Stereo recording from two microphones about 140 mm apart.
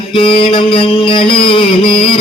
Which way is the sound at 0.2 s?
40° left (ahead or behind).